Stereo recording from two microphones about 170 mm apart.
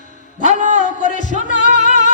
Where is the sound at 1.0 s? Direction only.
45° left (ahead or behind).